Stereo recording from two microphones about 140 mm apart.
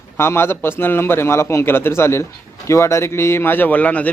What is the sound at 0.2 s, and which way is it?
A man's voice, 20° left (ahead or behind).